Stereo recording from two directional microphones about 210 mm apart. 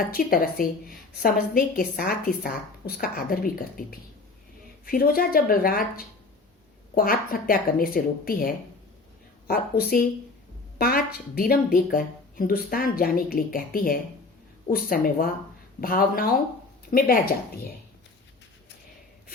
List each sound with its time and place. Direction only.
0.1 s a woman's voice: 45° left (ahead or behind)
4.9 s a woman's voice: 45° left (ahead or behind)